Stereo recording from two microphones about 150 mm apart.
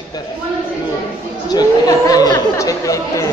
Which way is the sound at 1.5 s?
25° left (ahead or behind).